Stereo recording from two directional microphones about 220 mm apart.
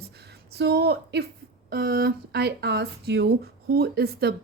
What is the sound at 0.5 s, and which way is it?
Speech, 50° right (ahead or behind).